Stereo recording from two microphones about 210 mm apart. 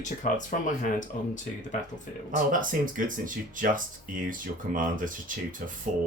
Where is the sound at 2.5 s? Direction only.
40° right (ahead or behind).